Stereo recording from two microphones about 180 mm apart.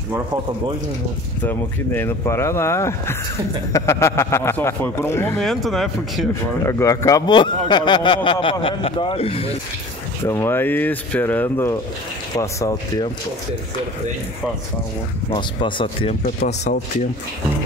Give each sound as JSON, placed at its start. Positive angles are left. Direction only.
{"t": 1.4, "sound": "speech", "side_deg": 10}
{"t": 5.4, "sound": "speech", "side_deg": 0}
{"t": 6.6, "sound": "speech", "side_deg": 15}
{"t": 10.2, "sound": "speech", "side_deg": 15}
{"t": 15.2, "sound": "speech", "side_deg": 30}